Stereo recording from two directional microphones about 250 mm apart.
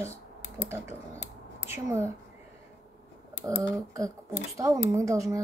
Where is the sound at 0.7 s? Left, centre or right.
Centre.